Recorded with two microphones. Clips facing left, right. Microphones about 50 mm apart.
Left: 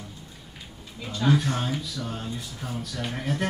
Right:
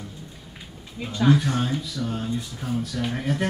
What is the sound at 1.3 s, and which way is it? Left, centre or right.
Speech, centre.